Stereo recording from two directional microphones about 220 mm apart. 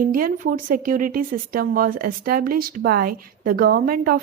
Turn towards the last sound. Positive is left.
turn(degrees=-40)  # may be behind; listen again after turning